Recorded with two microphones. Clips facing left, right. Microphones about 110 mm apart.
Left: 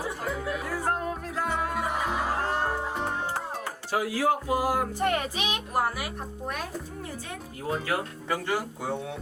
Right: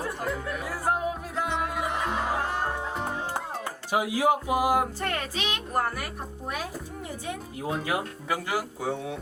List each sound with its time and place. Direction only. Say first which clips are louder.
0.0 s music: even; centre (ahead or behind)
3.9 s speech: right 2 dB; 15° right (ahead or behind)
4.9 s speech: left 4 dB; 15° left (ahead or behind)
7.9 s speech: even; 5° right (ahead or behind)